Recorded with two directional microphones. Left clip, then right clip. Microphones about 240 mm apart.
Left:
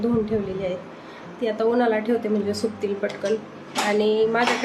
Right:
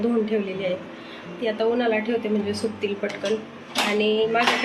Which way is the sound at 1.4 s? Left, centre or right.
Centre.